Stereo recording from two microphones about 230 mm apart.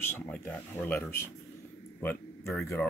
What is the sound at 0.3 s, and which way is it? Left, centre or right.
Speech, centre.